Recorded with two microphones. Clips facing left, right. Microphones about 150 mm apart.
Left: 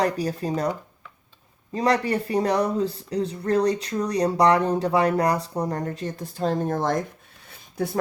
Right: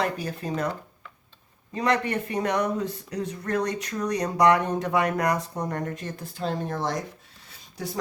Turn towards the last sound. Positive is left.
turn(degrees=55)  # may be behind; listen again after turning